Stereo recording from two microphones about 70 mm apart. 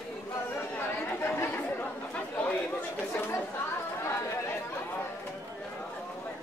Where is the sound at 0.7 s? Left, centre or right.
Left.